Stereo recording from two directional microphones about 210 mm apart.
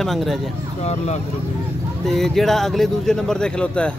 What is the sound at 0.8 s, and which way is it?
Speech, 30° left (ahead or behind).